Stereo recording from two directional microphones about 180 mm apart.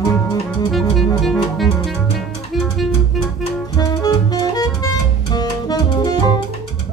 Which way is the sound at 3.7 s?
20° left (ahead or behind).